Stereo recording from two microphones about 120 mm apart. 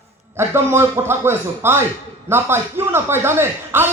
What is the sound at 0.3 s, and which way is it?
A man's voice, 20° right (ahead or behind).